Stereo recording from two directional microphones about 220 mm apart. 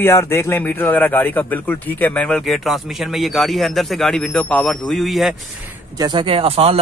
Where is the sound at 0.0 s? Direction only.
10° left (ahead or behind).